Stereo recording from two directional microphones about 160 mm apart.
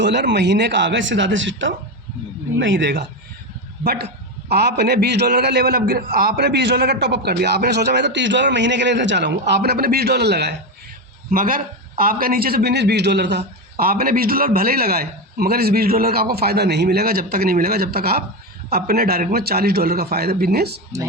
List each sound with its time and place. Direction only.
0.0 s a man's voice: 90° right
2.8 s a man's voice: 90° right
11.3 s a man's voice: 60° right (ahead or behind); by 20.7 s 75° right (ahead or behind)